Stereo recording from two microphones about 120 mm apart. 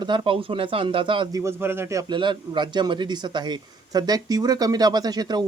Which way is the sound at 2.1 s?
40° right (ahead or behind).